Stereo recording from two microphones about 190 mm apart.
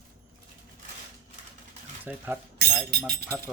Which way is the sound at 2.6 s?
55° right (ahead or behind).